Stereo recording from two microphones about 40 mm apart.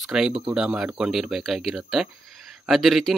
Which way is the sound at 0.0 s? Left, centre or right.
Centre.